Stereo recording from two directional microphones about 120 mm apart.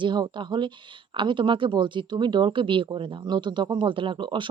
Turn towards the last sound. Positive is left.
turn(degrees=-40)  # may be behind; listen again after turning